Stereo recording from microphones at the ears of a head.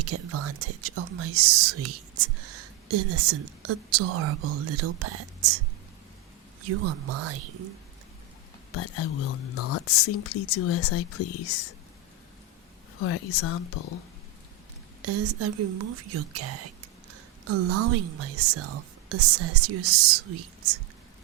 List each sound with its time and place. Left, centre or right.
0.0 s speech: right
8.7 s speech: left
13.0 s speech: left
15.0 s speech: right